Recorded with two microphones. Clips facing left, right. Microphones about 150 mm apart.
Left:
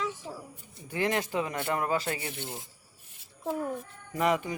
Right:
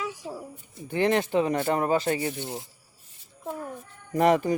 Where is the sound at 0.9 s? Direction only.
25° right (ahead or behind).